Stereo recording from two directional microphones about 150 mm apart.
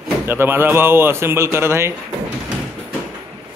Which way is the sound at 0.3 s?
15° right (ahead or behind).